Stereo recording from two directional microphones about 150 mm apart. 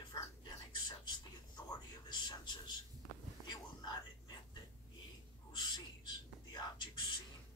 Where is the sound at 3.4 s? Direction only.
30° left (ahead or behind).